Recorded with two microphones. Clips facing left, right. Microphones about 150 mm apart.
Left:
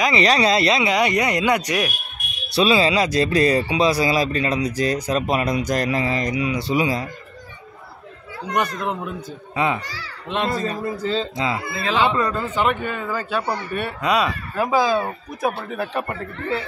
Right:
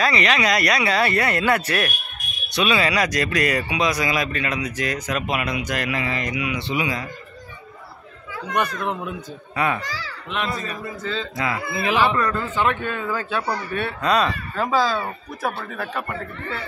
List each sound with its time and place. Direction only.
0.2 s speech: 30° left (ahead or behind); by 2.0 s 15° left (ahead or behind)
2.5 s speech: 30° left (ahead or behind)
9.6 s speech: 20° left (ahead or behind)
11.7 s speech: 15° right (ahead or behind)
12.0 s speech: 20° left (ahead or behind)
13.4 s speech: 25° left (ahead or behind)
13.7 s speech: 10° left (ahead or behind)